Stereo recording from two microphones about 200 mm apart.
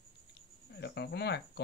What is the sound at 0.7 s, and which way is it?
Speech, 55° left (ahead or behind).